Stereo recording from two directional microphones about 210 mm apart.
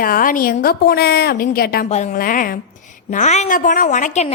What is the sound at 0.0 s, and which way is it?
A woman's voice, 40° left (ahead or behind).